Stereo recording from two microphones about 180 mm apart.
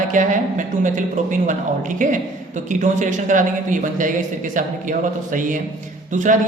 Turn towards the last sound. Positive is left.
turn(degrees=-45)  # may be behind; listen again after turning